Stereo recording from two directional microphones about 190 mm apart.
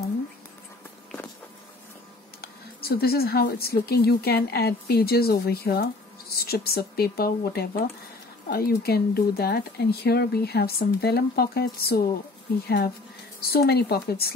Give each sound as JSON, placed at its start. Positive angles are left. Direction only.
{"t": 2.4, "sound": "speech", "side_deg": 55}